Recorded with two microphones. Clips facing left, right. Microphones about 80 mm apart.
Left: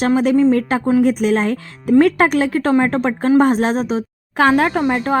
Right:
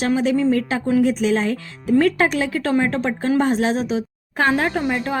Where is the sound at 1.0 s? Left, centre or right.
Left.